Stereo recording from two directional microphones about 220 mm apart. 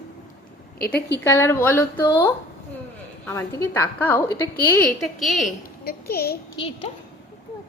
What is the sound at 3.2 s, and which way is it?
A woman's voice, 10° left (ahead or behind).